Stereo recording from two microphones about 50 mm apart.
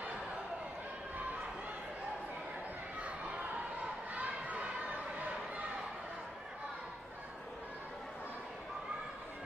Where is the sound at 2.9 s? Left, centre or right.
Right.